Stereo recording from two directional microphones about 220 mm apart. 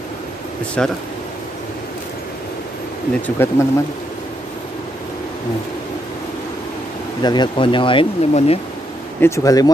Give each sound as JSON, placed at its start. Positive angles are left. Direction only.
{"t": 0.8, "sound": "speech", "side_deg": 5}
{"t": 3.2, "sound": "speech", "side_deg": 10}
{"t": 7.2, "sound": "speech", "side_deg": 20}
{"t": 9.2, "sound": "speech", "side_deg": 15}